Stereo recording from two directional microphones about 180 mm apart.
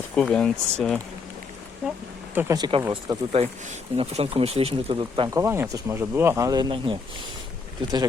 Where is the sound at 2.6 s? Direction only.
30° right (ahead or behind).